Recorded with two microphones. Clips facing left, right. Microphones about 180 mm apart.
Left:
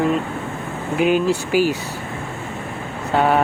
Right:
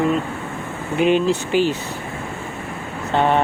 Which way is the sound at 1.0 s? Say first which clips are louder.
Right 1 dB; 5° left (ahead or behind).